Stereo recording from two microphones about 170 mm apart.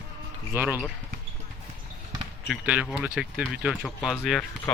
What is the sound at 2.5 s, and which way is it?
Speech, 5° right (ahead or behind).